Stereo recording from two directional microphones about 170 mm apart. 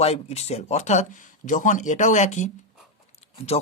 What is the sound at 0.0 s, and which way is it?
Speech, 40° left (ahead or behind).